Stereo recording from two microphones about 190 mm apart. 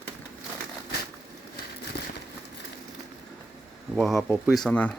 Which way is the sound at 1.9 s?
60° left (ahead or behind).